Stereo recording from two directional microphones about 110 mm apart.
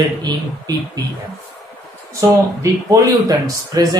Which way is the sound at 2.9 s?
30° right (ahead or behind).